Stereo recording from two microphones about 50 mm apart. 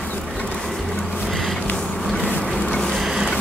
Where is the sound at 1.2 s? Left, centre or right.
Centre.